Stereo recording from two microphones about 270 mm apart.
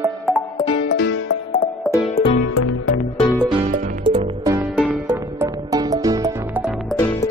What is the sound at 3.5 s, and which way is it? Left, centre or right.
Music, centre.